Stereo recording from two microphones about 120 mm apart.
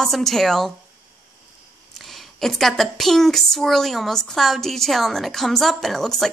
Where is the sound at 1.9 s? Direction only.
Centre (ahead or behind).